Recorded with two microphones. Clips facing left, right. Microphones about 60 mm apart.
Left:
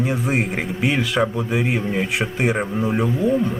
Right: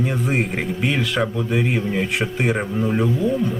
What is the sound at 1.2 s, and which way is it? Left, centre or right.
Speech, centre.